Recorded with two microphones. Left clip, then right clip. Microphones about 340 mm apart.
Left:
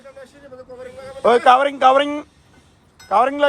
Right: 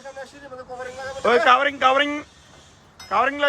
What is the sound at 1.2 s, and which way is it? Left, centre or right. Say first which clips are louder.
Speech: left 4 dB; centre.